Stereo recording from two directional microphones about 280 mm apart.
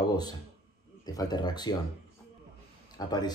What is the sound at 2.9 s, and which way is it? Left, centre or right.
Speech, centre.